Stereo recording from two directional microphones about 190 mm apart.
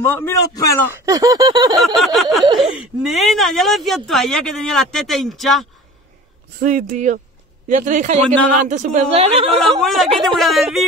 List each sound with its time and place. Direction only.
0.0 s a man's voice: 10° left (ahead or behind)
0.9 s a sound: 15° right (ahead or behind)
2.8 s speech: centre (ahead or behind)
6.6 s a woman's voice: 40° right (ahead or behind)
9.8 s speech: centre (ahead or behind)